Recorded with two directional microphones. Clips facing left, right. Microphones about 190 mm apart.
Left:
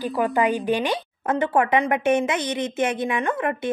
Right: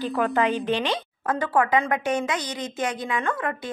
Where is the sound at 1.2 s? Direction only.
25° left (ahead or behind).